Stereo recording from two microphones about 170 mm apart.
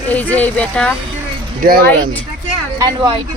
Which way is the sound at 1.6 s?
60° right (ahead or behind).